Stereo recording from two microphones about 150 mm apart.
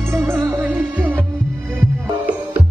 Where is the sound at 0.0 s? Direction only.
15° right (ahead or behind).